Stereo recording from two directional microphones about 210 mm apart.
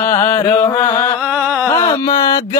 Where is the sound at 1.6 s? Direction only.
15° left (ahead or behind).